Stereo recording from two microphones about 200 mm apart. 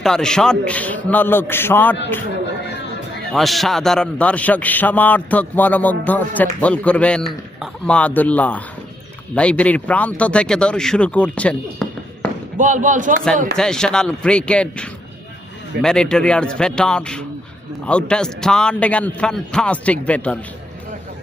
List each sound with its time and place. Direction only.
0.0 s a man's voice: 5° left (ahead or behind)
3.3 s a man's voice: centre (ahead or behind)
12.5 s speech: 40° right (ahead or behind)
13.6 s a man's voice: 5° left (ahead or behind)